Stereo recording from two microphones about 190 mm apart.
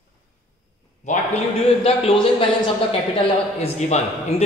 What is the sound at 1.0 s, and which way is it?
A man's voice, 35° left (ahead or behind).